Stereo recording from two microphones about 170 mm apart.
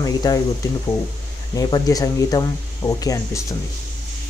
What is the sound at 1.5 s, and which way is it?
Speech, 20° left (ahead or behind).